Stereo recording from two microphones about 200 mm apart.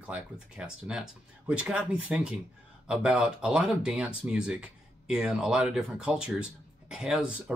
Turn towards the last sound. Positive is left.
turn(degrees=-5)  # may be behind; listen again after turning